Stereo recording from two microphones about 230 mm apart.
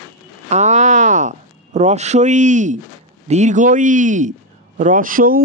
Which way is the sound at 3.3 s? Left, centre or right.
Right.